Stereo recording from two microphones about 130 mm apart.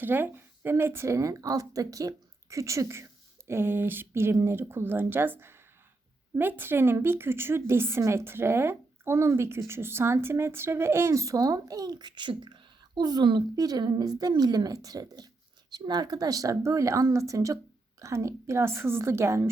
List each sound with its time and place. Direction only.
0.0 s a woman's voice: 15° right (ahead or behind)